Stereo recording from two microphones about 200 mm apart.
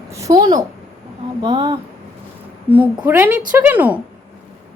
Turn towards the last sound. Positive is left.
turn(degrees=-10)  # may be behind; listen again after turning